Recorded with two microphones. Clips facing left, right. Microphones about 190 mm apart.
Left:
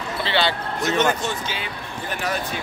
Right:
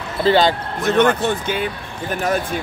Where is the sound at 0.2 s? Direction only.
45° right (ahead or behind).